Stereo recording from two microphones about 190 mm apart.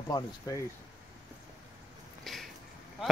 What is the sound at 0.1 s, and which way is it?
Speech, 20° left (ahead or behind).